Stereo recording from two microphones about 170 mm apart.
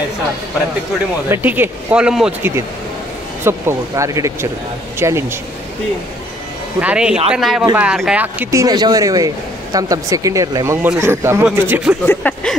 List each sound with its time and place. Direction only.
1.3 s speech: 10° right (ahead or behind)
3.4 s speech: 15° right (ahead or behind)
6.8 s speech: 5° right (ahead or behind)
12.1 s a sound: 10° left (ahead or behind)